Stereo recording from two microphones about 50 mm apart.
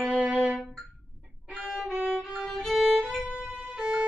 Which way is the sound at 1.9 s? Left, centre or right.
Right.